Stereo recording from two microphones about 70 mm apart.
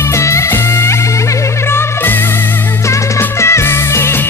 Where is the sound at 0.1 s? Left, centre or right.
Left.